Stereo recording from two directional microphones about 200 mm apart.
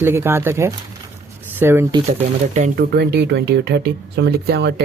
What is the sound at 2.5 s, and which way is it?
Speech, 35° right (ahead or behind).